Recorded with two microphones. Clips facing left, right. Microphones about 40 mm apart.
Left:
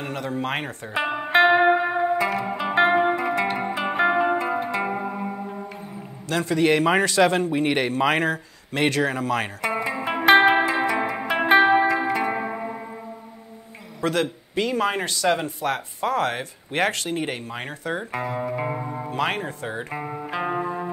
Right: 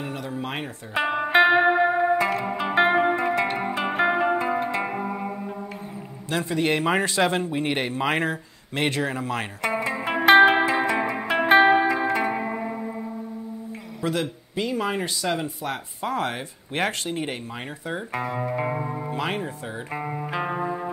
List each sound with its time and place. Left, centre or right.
0.0 s speech: left
0.9 s music: centre
6.3 s a man's voice: left
9.8 s music: centre
14.0 s a man's voice: left
18.1 s speech: centre
19.0 s a man's voice: left
19.9 s music: centre